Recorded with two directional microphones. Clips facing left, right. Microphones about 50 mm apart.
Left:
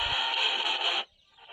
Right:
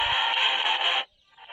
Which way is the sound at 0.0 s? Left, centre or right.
Right.